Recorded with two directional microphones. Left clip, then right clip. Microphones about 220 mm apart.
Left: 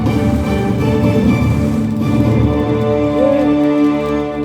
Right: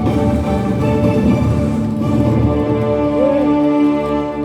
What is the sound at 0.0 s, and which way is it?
Music, 45° left (ahead or behind).